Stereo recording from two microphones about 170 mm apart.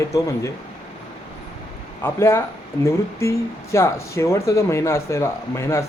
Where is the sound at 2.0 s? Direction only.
15° left (ahead or behind).